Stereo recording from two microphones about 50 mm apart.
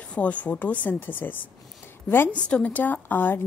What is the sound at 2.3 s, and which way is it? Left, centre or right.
Speech, left.